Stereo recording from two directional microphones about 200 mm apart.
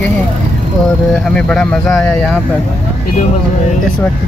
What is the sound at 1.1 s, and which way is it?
Speech, 5° left (ahead or behind).